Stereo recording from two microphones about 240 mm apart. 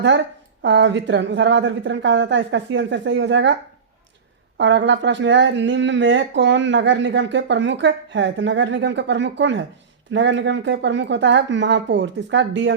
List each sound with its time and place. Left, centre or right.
0.6 s speech: right
4.5 s speech: right